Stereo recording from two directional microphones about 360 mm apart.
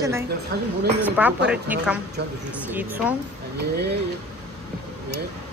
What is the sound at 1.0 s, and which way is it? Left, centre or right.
Speech, centre.